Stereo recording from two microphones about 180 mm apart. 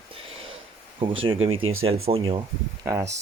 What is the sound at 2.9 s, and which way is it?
Speech, 15° right (ahead or behind).